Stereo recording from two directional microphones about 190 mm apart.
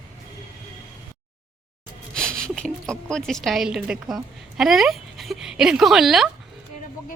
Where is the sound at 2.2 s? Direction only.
5° left (ahead or behind).